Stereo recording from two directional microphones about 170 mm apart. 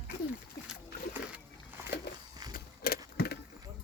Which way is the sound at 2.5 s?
65° left (ahead or behind).